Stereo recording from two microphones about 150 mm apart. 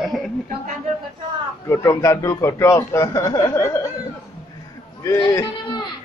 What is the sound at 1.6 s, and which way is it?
A man's voice, 20° left (ahead or behind).